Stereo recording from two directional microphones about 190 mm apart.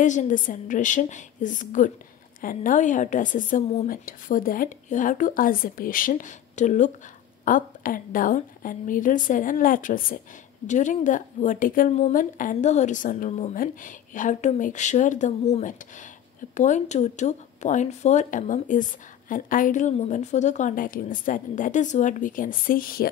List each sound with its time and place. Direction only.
0.0 s a woman's voice: 40° left (ahead or behind)